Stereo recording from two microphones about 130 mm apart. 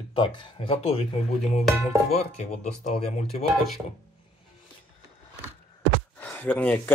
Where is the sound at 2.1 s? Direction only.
55° left (ahead or behind).